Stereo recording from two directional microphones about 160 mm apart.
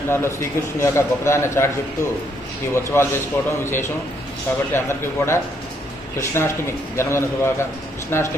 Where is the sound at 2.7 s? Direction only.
15° left (ahead or behind).